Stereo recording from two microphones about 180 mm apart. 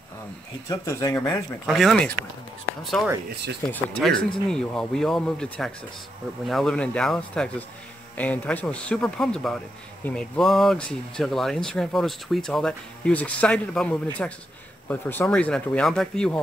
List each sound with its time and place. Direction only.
0.7 s speech: 20° left (ahead or behind)
1.7 s speech: centre (ahead or behind)